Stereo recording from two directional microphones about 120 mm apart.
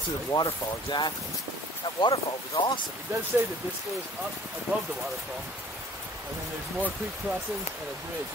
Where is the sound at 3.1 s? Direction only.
20° right (ahead or behind).